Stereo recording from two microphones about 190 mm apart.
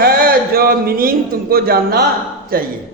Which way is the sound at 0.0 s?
50° right (ahead or behind).